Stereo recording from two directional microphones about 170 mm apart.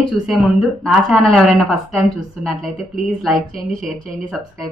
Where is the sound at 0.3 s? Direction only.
Centre (ahead or behind).